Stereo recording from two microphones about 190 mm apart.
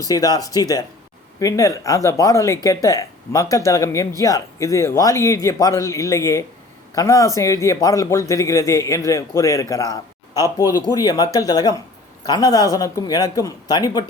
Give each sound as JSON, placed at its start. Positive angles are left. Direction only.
{"t": 0.0, "sound": "a man's voice", "side_deg": 20}